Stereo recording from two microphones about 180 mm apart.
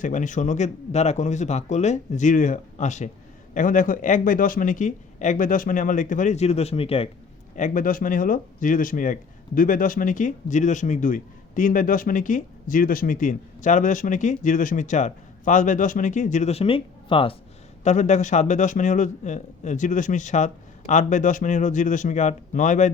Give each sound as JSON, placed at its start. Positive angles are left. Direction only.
{"t": 0.0, "sound": "speech", "side_deg": 45}
{"t": 7.5, "sound": "speech", "side_deg": 45}
{"t": 17.8, "sound": "speech", "side_deg": 40}